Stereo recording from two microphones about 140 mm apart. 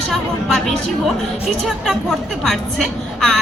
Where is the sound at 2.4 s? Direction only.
5° left (ahead or behind).